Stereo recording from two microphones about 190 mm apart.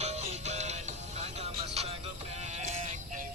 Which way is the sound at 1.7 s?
35° right (ahead or behind).